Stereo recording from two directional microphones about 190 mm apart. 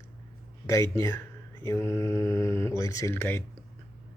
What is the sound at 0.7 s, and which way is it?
Speech, 15° left (ahead or behind).